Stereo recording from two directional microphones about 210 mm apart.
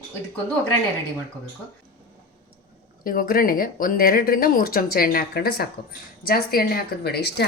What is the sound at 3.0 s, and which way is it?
Speech, 40° left (ahead or behind).